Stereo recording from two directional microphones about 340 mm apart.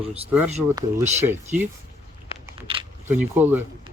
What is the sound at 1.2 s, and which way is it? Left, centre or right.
Speech, centre.